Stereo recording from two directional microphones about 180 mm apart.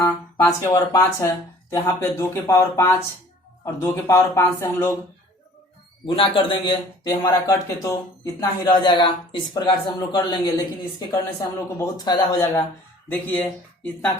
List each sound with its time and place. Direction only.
0.0 s a man's voice: 20° left (ahead or behind)
6.1 s a man's voice: 30° left (ahead or behind)
13.1 s a man's voice: 10° left (ahead or behind)